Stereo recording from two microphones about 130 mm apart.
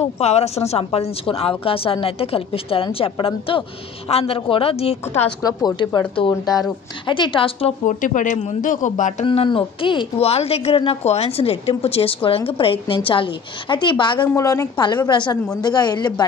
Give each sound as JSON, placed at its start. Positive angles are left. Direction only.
{"t": 0.0, "sound": "speech", "side_deg": 55}
{"t": 5.4, "sound": "a woman's voice", "side_deg": 30}
{"t": 7.8, "sound": "speech", "side_deg": 75}
{"t": 9.2, "sound": "speech", "side_deg": 45}
{"t": 14.2, "sound": "a woman's voice", "side_deg": 25}